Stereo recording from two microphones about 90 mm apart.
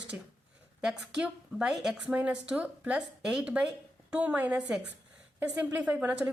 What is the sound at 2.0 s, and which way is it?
A woman's voice, 15° right (ahead or behind).